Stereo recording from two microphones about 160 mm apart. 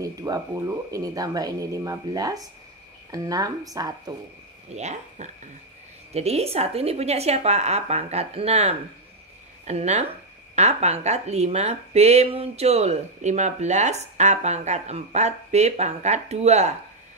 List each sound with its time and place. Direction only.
0.0 s speech: 20° right (ahead or behind)
4.7 s a woman's voice: 45° right (ahead or behind)